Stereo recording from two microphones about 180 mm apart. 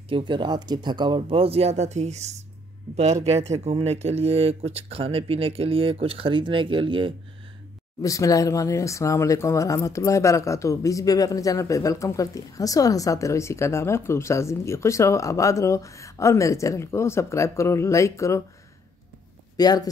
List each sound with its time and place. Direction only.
0.1 s speech: 25° right (ahead or behind)
8.0 s speech: 20° left (ahead or behind)
19.5 s speech: 20° left (ahead or behind)